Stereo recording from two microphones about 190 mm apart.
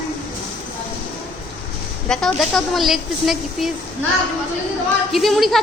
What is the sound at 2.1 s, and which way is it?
Speech, 5° left (ahead or behind).